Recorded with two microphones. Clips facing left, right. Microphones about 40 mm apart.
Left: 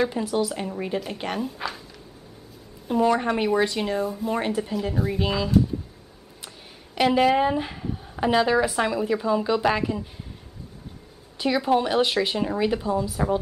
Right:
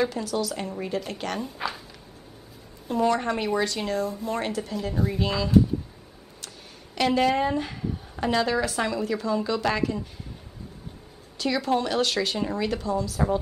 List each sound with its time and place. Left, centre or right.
0.0 s a woman's voice: left
0.6 s speech: centre
1.4 s speech: centre
2.9 s speech: centre
7.0 s speech: centre
11.3 s a woman's voice: centre